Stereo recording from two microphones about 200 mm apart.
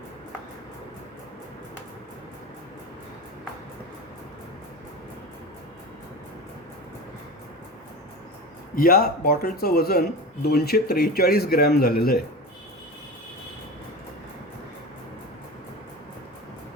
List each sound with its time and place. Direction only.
8.7 s speech: 45° left (ahead or behind)